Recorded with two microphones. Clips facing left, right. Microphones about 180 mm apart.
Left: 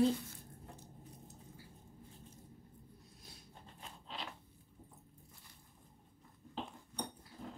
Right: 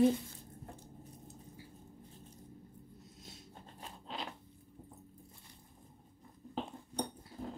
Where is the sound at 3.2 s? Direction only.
25° right (ahead or behind).